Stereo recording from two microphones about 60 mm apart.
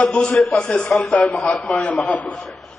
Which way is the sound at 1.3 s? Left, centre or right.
Left.